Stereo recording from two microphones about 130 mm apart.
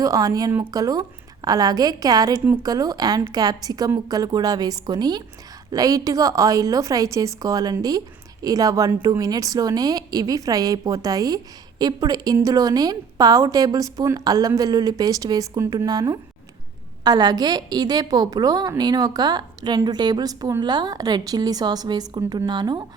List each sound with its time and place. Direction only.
0.0 s a woman's voice: 30° right (ahead or behind)